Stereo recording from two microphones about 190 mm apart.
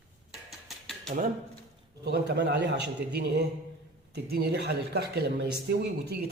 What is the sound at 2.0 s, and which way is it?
Speech, 60° right (ahead or behind).